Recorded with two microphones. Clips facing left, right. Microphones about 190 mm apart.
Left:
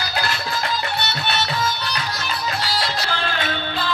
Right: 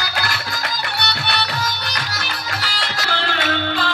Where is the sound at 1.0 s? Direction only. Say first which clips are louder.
Even; 70° right (ahead or behind).